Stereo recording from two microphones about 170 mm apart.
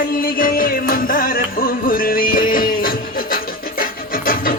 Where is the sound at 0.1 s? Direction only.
55° left (ahead or behind).